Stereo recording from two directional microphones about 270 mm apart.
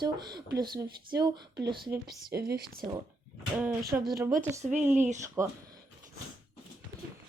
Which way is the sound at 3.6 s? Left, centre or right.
Centre.